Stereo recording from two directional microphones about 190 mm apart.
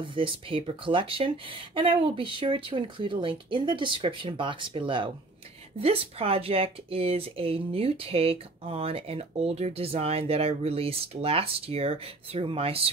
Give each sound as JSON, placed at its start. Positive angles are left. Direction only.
{"t": 0.0, "sound": "speech", "side_deg": -25}